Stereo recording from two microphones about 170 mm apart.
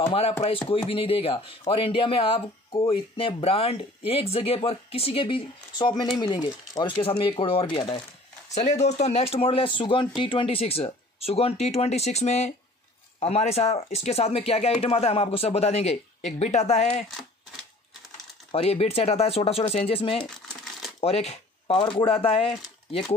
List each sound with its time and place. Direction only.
0.0 s speech: 35° left (ahead or behind)
8.5 s speech: 40° left (ahead or behind)
18.5 s speech: 35° left (ahead or behind)
20.2 s a sound: 5° left (ahead or behind)
21.0 s speech: 35° left (ahead or behind)